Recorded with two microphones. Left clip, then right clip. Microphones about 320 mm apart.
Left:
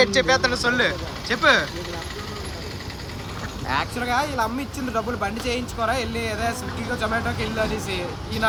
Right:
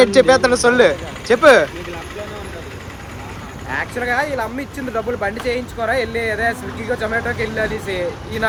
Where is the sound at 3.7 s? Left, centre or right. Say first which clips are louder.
Right 3 dB; centre.